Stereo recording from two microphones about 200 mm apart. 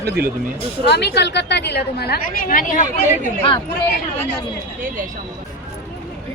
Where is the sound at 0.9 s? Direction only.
55° left (ahead or behind); by 3.0 s 40° left (ahead or behind).